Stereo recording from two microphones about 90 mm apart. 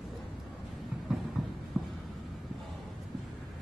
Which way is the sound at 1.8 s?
5° right (ahead or behind).